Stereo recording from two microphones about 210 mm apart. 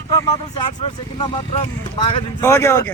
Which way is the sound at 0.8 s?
25° left (ahead or behind).